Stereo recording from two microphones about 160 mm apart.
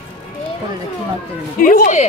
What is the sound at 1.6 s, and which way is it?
Speech, 55° left (ahead or behind).